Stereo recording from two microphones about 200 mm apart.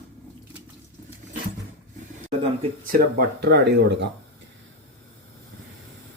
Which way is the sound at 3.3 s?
55° right (ahead or behind).